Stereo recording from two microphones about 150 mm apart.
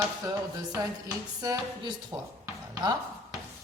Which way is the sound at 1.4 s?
25° right (ahead or behind).